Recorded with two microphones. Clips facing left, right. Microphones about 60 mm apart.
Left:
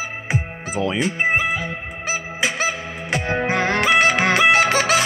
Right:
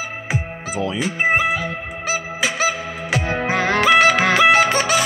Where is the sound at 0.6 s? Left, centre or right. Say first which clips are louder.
Left 1 dB; left.